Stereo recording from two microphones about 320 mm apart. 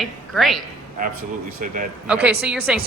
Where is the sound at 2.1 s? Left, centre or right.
Centre.